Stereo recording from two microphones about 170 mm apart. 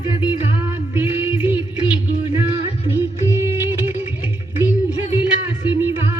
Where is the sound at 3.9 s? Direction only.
10° right (ahead or behind).